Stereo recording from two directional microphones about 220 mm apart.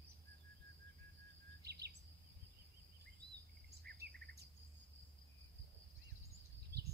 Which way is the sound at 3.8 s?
45° right (ahead or behind).